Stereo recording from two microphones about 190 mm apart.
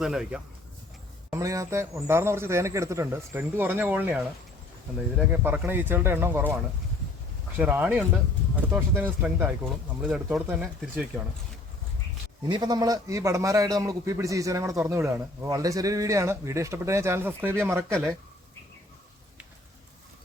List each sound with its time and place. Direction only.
0.0 s speech: 5° right (ahead or behind)
1.3 s a man's voice: 15° right (ahead or behind)
7.6 s a man's voice: 10° right (ahead or behind)
12.5 s a man's voice: 20° right (ahead or behind)